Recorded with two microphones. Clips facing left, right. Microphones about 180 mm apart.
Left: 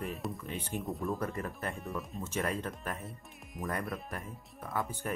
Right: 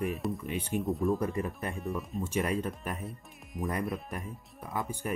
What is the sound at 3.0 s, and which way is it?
Speech, centre (ahead or behind).